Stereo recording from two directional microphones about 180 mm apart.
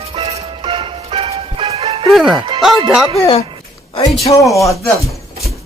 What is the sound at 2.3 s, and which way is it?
Speech, 30° right (ahead or behind).